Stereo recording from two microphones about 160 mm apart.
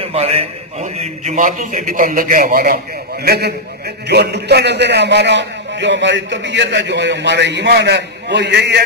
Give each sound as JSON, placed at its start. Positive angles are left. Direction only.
{"t": 0.0, "sound": "a man's voice", "side_deg": -40}
{"t": 3.3, "sound": "a man's voice", "side_deg": -90}